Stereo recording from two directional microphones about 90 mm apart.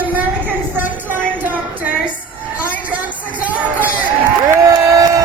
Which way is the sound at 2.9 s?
15° right (ahead or behind).